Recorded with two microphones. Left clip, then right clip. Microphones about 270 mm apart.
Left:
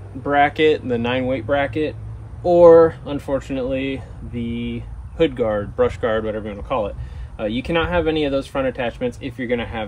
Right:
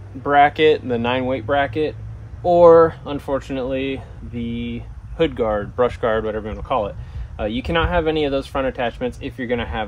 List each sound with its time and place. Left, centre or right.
0.2 s speech: centre